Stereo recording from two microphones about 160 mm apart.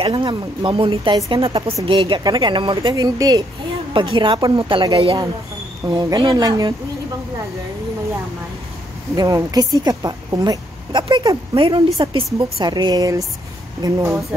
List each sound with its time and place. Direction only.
0.0 s a woman's voice: 30° right (ahead or behind)
9.1 s a woman's voice: 25° right (ahead or behind)